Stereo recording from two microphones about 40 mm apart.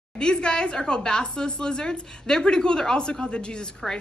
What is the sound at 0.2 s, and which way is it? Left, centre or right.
A woman's voice, left.